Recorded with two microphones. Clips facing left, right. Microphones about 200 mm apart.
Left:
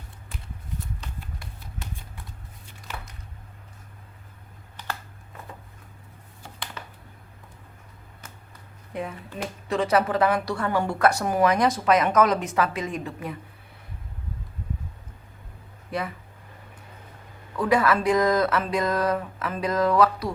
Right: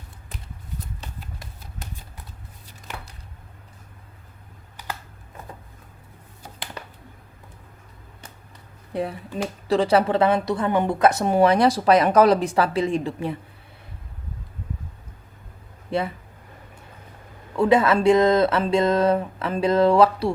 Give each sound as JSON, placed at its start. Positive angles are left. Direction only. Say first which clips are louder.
{"t": 8.9, "sound": "speech", "louder": "right 5 dB", "side_deg": -35}
{"t": 15.9, "sound": "speech", "louder": "right 5 dB", "side_deg": -25}
{"t": 17.6, "sound": "speech", "louder": "right 4 dB", "side_deg": -25}